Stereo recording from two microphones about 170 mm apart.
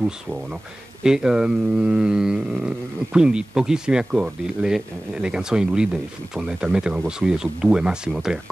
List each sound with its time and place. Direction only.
1.0 s speech: 5° right (ahead or behind)